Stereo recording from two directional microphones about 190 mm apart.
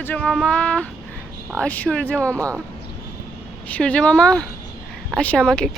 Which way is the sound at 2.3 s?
15° right (ahead or behind).